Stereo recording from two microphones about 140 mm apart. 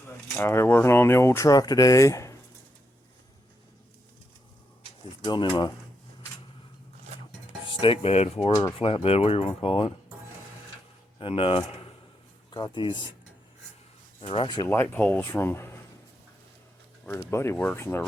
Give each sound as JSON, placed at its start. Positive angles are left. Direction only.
{"t": 0.3, "sound": "speech", "side_deg": 20}
{"t": 5.2, "sound": "speech", "side_deg": 30}
{"t": 7.6, "sound": "cutlery", "side_deg": 40}
{"t": 8.8, "sound": "speech", "side_deg": 45}
{"t": 11.2, "sound": "speech", "side_deg": 40}
{"t": 14.2, "sound": "speech", "side_deg": 40}
{"t": 14.7, "sound": "speech", "side_deg": 15}
{"t": 17.1, "sound": "speech", "side_deg": 20}